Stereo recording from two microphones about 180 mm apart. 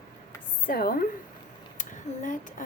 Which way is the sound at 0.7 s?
55° left (ahead or behind).